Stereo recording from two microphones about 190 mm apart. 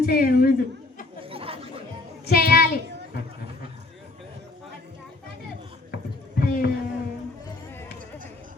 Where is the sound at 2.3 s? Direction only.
50° left (ahead or behind).